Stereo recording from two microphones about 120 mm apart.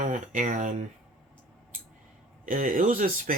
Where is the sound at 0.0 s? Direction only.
90° right.